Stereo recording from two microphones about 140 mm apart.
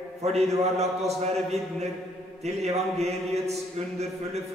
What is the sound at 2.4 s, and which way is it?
Speech, 50° right (ahead or behind).